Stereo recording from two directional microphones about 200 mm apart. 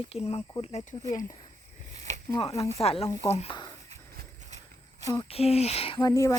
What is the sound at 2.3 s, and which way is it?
Speech, 25° left (ahead or behind).